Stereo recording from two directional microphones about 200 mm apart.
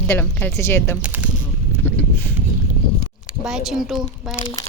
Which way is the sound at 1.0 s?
5° right (ahead or behind).